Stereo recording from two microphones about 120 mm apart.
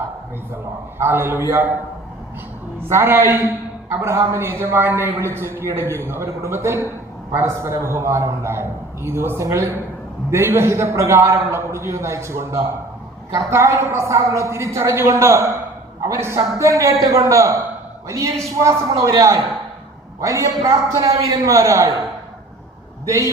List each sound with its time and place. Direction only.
0.9 s a man's voice: 20° right (ahead or behind)
2.9 s a man's voice: 20° right (ahead or behind)
20.2 s a man's voice: 25° right (ahead or behind)